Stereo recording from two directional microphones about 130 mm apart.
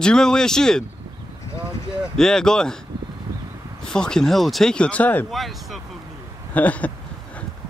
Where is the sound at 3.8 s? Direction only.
5° left (ahead or behind).